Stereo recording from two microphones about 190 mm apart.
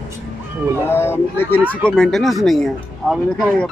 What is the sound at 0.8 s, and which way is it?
A man's voice, 10° left (ahead or behind).